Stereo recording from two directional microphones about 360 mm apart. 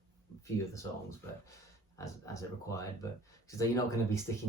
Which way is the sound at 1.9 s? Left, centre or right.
Centre.